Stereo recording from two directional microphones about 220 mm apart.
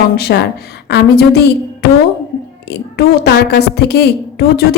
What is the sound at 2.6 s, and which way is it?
A woman's voice, 45° left (ahead or behind).